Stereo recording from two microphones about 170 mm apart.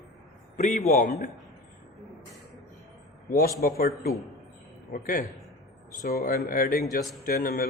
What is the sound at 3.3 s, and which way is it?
A man's voice, 60° left (ahead or behind).